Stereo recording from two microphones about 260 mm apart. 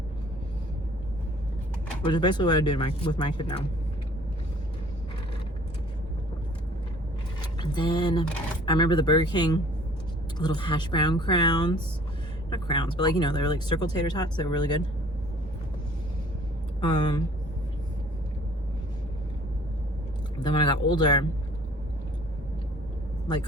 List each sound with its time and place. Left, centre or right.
2.0 s speech: centre
7.6 s speech: centre
16.8 s speech: centre
20.4 s speech: centre